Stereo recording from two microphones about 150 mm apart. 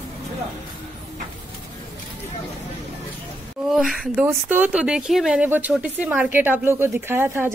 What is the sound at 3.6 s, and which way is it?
Speech, centre (ahead or behind).